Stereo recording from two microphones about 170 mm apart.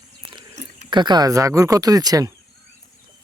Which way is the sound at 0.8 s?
25° right (ahead or behind).